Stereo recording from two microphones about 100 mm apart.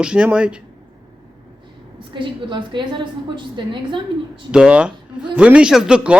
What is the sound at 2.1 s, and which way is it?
A woman's voice, 55° right (ahead or behind).